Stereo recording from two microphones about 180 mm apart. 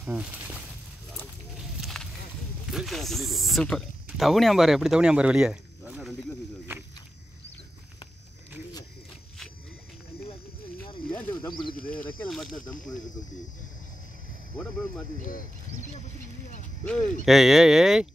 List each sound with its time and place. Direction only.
0.0 s speech: 10° right (ahead or behind)
1.8 s a sound: centre (ahead or behind)
2.7 s speech: centre (ahead or behind)
11.4 s speech: 25° left (ahead or behind)
11.7 s speech: 50° left (ahead or behind)
12.3 s speech: centre (ahead or behind)
16.8 s speech: 5° left (ahead or behind)